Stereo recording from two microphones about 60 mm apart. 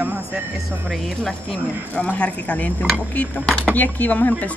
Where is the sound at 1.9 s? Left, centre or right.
Left.